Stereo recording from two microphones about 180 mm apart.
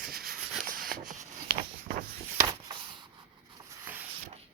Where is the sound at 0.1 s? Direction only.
55° right (ahead or behind).